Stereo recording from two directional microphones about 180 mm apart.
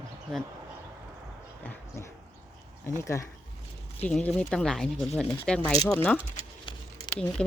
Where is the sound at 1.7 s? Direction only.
15° left (ahead or behind).